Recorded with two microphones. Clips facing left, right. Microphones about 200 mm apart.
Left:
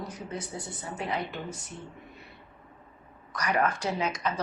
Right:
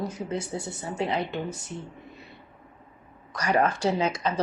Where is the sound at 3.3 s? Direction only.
30° right (ahead or behind).